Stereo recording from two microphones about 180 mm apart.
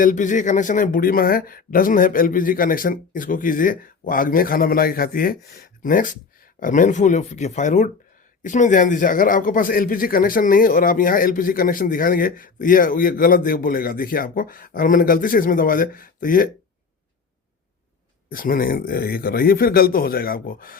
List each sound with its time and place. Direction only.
0.0 s speech: 45° left (ahead or behind)
18.3 s speech: 50° left (ahead or behind)